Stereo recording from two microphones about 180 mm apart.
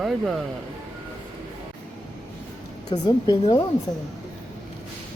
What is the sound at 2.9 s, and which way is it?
Speech, 20° left (ahead or behind).